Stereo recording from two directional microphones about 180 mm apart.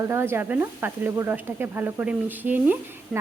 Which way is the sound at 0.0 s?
15° right (ahead or behind).